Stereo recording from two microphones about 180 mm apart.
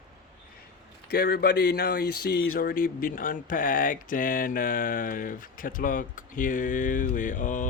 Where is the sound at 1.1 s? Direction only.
60° left (ahead or behind); by 7.7 s 45° left (ahead or behind).